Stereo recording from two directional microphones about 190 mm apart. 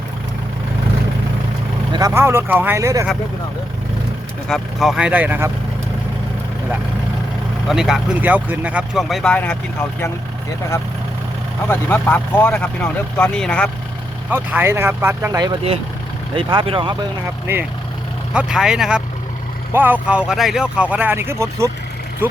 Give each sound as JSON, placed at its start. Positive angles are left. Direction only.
{"t": 1.9, "sound": "speech", "side_deg": -20}
{"t": 4.4, "sound": "speech", "side_deg": 0}
{"t": 7.7, "sound": "speech", "side_deg": 0}
{"t": 11.7, "sound": "speech", "side_deg": 10}
{"t": 14.3, "sound": "speech", "side_deg": -10}
{"t": 17.4, "sound": "speech", "side_deg": -10}